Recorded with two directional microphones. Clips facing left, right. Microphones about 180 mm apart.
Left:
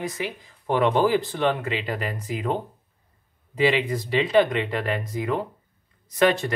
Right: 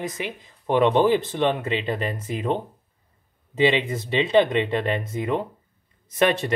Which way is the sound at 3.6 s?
25° right (ahead or behind).